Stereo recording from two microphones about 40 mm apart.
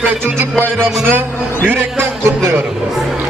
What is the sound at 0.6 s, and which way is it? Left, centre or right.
Speech, right.